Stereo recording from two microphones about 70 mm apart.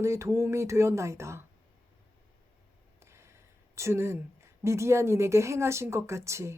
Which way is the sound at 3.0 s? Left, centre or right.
Right.